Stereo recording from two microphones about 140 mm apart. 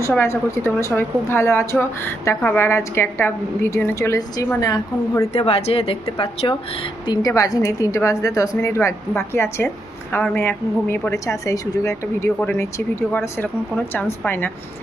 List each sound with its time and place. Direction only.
0.1 s a woman's voice: 20° left (ahead or behind)
5.3 s a woman's voice: 45° left (ahead or behind)
7.1 s a woman's voice: 25° left (ahead or behind)
14.3 s speech: 15° left (ahead or behind)